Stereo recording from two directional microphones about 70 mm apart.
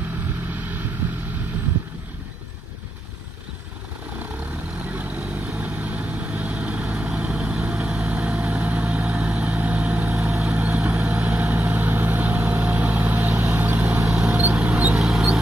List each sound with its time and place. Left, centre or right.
0.6 s vehicle: right
4.8 s vehicle: right
14.0 s mouse: centre
15.0 s mouse: centre